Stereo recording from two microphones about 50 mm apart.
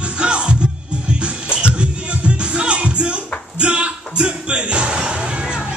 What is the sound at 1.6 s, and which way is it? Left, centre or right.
Music, right.